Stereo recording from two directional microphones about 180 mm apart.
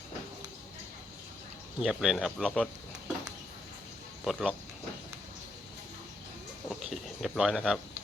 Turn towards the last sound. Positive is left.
turn(degrees=0)  # may be behind; listen again after turning